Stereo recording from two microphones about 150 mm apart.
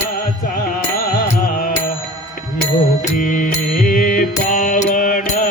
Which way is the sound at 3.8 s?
65° left (ahead or behind).